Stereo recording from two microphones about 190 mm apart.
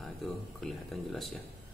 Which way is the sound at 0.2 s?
Centre (ahead or behind).